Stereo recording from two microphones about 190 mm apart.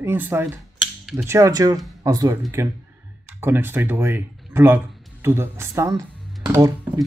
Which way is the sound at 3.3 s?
10° right (ahead or behind).